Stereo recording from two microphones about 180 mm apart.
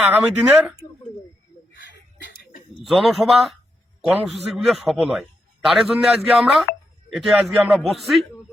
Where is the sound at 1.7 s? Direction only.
75° left (ahead or behind).